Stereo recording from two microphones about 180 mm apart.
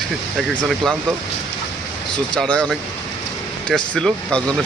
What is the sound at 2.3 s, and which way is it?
Speech, 5° left (ahead or behind).